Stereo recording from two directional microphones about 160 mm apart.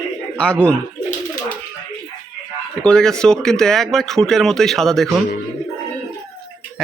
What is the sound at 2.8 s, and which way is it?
Speech, 5° left (ahead or behind).